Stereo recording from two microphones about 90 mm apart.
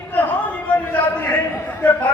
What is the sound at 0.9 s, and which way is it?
Speech, 20° left (ahead or behind).